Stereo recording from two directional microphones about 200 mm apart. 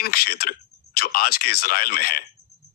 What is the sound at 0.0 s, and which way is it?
A man's voice, 50° left (ahead or behind).